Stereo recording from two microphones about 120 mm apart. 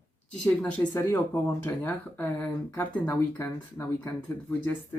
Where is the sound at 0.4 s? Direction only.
10° left (ahead or behind).